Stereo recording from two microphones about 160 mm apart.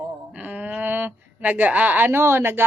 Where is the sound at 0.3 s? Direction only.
10° right (ahead or behind).